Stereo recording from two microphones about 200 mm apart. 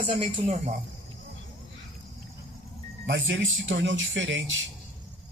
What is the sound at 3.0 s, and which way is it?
Speech, 65° right (ahead or behind).